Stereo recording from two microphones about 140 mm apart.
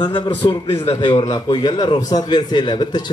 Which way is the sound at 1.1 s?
30° left (ahead or behind).